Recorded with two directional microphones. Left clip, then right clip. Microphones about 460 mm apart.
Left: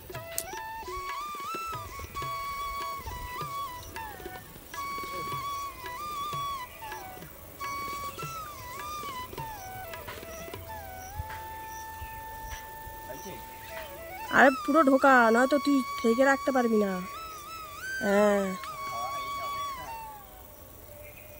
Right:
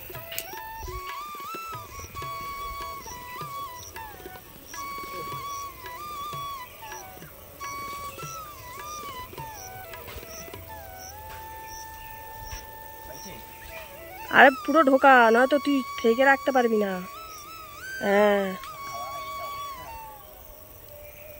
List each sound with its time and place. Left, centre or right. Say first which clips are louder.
0.1 s music: even; centre
14.2 s speech: right 5 dB; centre
17.8 s music: right 3 dB; centre